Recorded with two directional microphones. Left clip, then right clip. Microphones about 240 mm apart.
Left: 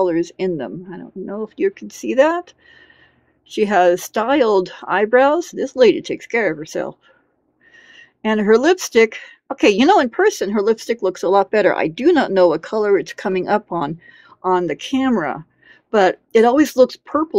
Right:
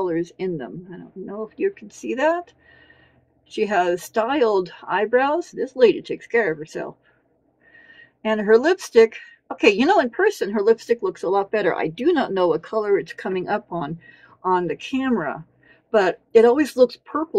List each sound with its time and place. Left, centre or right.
0.0 s speech: left